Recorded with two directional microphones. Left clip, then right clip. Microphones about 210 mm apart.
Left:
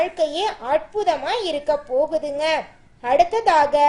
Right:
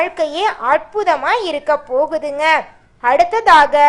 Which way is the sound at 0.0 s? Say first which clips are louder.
Right 4 dB; centre (ahead or behind).